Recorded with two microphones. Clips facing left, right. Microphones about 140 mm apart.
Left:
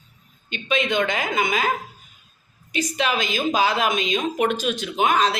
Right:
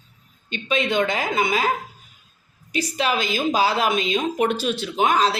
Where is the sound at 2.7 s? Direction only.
35° right (ahead or behind).